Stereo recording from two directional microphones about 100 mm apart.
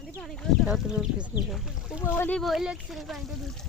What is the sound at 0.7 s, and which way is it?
Speech, 10° right (ahead or behind).